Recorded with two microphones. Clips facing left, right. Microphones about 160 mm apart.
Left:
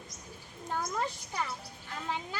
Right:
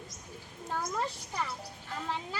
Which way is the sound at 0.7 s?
Centre (ahead or behind).